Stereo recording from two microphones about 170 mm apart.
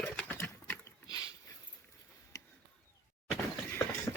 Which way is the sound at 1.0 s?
20° left (ahead or behind).